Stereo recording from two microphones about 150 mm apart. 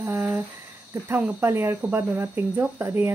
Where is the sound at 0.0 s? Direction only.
15° right (ahead or behind).